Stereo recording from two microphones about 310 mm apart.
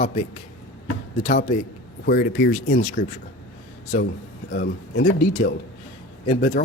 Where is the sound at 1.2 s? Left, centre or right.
Left.